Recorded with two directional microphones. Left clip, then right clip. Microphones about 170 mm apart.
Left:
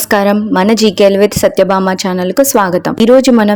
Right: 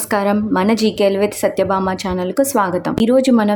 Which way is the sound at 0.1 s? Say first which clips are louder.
Left 6 dB; 30° left (ahead or behind).